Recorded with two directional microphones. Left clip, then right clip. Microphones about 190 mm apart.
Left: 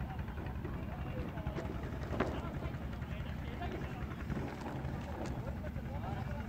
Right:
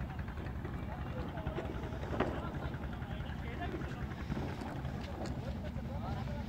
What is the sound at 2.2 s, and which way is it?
Vehicle, 40° right (ahead or behind).